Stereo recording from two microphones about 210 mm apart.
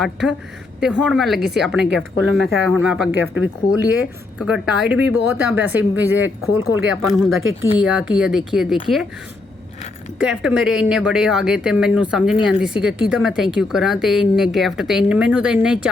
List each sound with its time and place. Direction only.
0.0 s speech: centre (ahead or behind)
3.3 s speech: 70° left (ahead or behind)
4.4 s speech: 5° right (ahead or behind)
10.2 s speech: 5° right (ahead or behind)